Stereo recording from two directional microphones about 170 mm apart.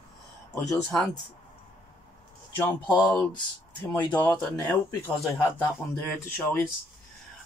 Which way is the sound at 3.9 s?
10° left (ahead or behind).